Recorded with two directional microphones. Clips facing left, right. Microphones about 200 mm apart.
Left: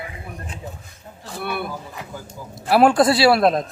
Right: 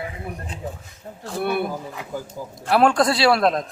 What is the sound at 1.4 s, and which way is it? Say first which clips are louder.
Speech: right 4 dB; 45° right (ahead or behind).